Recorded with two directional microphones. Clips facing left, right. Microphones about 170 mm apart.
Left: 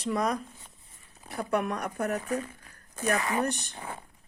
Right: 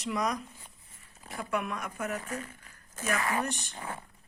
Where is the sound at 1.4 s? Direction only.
35° left (ahead or behind).